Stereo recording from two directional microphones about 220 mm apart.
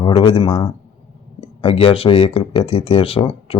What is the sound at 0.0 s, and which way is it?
A man's voice, 25° left (ahead or behind).